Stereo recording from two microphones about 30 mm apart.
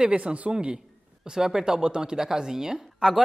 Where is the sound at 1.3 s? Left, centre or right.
Right.